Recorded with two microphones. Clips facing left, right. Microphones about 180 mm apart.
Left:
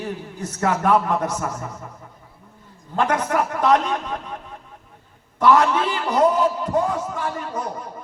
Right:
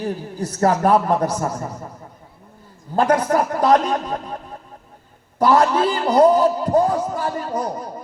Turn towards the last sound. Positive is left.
turn(degrees=-35)  # may be behind; listen again after turning